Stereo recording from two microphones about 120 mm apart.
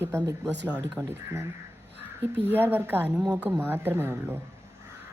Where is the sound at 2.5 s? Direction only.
15° right (ahead or behind).